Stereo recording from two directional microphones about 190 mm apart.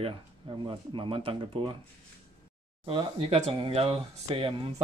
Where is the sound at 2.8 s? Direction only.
25° right (ahead or behind).